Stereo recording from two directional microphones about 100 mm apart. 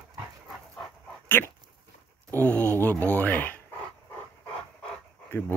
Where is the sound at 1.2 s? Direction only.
20° left (ahead or behind).